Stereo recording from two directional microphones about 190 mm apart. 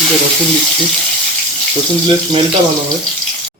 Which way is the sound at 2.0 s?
25° right (ahead or behind).